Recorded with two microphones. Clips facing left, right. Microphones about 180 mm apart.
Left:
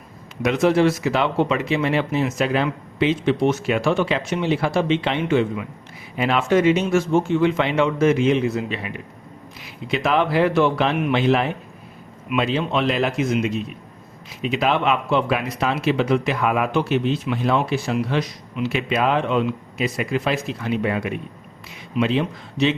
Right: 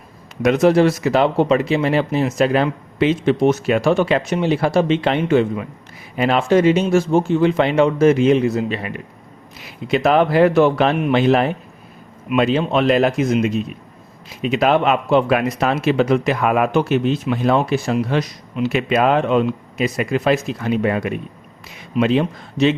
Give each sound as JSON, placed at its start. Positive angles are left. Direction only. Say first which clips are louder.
{"t": 0.4, "sound": "speech", "louder": "right 4 dB", "side_deg": -40}
{"t": 9.9, "sound": "speech", "louder": "right 5 dB", "side_deg": -45}